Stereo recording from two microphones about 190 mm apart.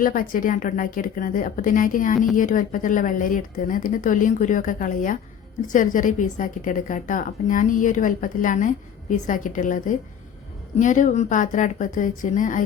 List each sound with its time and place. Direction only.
0.0 s a woman's voice: 45° left (ahead or behind)